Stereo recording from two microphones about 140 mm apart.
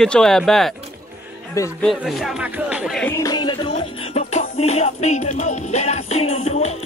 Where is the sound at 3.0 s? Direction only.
20° left (ahead or behind).